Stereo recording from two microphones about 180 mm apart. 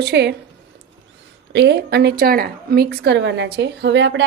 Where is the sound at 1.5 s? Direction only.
70° right (ahead or behind).